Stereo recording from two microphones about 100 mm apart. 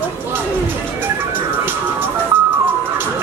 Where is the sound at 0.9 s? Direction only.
20° right (ahead or behind).